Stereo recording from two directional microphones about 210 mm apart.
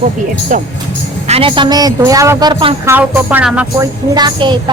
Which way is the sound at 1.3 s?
25° right (ahead or behind).